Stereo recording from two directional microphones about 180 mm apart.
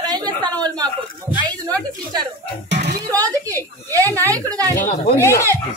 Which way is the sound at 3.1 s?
20° right (ahead or behind).